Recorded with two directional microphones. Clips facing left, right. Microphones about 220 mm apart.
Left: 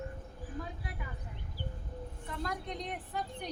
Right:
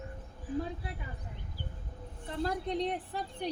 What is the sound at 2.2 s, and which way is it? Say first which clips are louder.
A woman's voice: right 6 dB; 30° right (ahead or behind).